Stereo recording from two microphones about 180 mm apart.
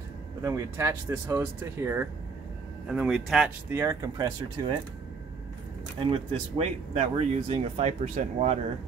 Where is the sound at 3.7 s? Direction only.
15° right (ahead or behind).